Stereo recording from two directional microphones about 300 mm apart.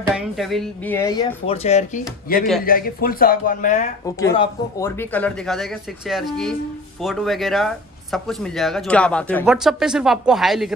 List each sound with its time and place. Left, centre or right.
0.1 s speech: centre
1.5 s speech: left
4.0 s speech: centre